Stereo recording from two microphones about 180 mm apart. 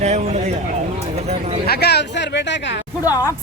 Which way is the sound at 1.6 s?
65° left (ahead or behind).